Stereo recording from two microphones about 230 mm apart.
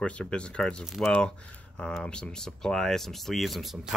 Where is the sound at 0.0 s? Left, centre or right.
Centre.